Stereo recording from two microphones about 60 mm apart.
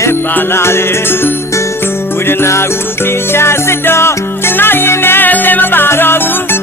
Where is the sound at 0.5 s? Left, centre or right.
Left.